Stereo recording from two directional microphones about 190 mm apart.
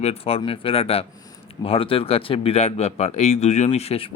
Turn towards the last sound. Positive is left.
turn(degrees=30)  # may be behind; listen again after turning